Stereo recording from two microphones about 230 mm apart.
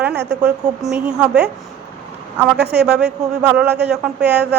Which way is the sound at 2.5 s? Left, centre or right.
Right.